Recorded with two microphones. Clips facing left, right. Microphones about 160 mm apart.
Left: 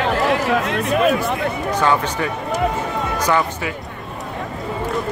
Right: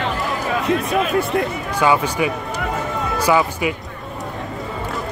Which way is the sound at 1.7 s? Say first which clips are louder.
Right 1 dB; 10° right (ahead or behind).